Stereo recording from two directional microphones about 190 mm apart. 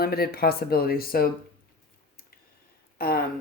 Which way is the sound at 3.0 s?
50° left (ahead or behind).